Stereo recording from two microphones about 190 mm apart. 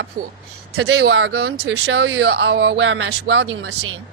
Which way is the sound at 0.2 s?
55° right (ahead or behind).